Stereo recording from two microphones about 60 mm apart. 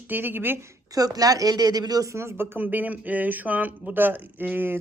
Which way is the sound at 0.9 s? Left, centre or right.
Right.